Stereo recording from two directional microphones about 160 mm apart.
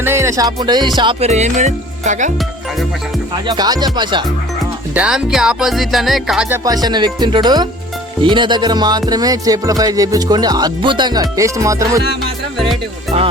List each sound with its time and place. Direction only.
0.0 s music: 15° right (ahead or behind)
1.2 s music: 45° right (ahead or behind)
3.4 s music: 25° right (ahead or behind)
4.9 s music: 5° right (ahead or behind)
6.8 s music: 25° right (ahead or behind)
13.1 s speech: 40° right (ahead or behind)